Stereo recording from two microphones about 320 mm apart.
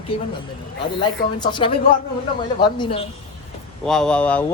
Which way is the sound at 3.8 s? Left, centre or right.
Centre.